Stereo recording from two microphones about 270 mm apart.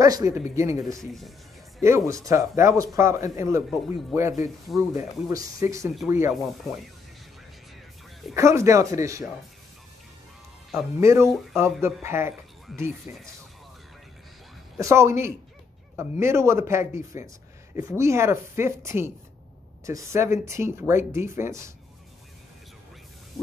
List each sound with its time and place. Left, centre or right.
0.0 s speech: centre
5.3 s speech: centre
8.4 s speech: centre
10.7 s speech: centre
14.8 s speech: centre